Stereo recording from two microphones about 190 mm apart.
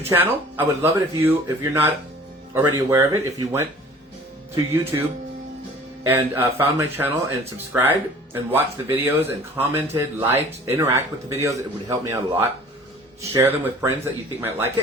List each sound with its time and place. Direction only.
0.0 s speech: 10° right (ahead or behind)